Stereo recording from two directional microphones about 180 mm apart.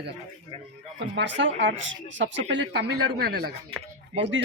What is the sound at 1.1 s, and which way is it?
Speech, 80° right.